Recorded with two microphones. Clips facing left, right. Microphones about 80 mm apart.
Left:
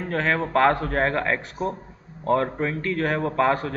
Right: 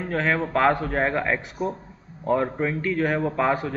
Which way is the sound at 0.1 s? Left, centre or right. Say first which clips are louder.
Left 1 dB; centre.